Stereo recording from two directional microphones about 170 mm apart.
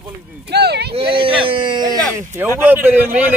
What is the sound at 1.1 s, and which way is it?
Speech, 30° right (ahead or behind).